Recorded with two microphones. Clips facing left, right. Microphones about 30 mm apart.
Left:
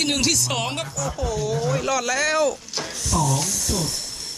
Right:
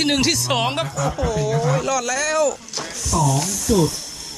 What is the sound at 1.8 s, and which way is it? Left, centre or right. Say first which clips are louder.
Speech: right 1 dB; centre.